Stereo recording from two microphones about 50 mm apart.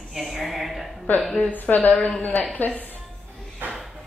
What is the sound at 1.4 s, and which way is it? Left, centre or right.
A woman's voice, left.